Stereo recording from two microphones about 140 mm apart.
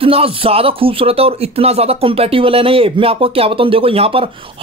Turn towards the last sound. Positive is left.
turn(degrees=-45)  # may be behind; listen again after turning